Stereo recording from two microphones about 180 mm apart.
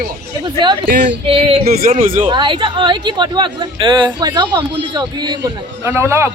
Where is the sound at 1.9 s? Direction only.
35° right (ahead or behind).